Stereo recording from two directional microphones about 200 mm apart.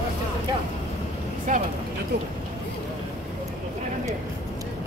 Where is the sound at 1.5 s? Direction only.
40° right (ahead or behind).